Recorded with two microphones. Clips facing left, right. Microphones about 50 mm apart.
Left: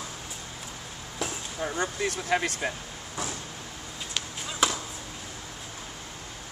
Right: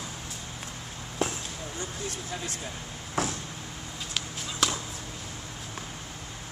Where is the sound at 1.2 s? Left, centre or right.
Right.